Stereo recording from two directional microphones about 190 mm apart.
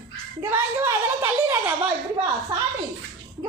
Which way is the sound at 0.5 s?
10° right (ahead or behind).